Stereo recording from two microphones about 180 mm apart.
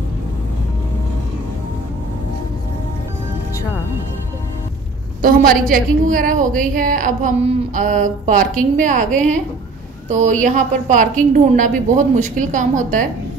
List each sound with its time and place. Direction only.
5.2 s a woman's voice: 50° right (ahead or behind)